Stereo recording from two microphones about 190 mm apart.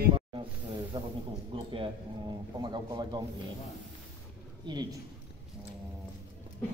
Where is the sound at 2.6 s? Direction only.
20° right (ahead or behind).